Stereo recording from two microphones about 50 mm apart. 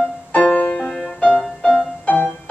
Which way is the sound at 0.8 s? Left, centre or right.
Centre.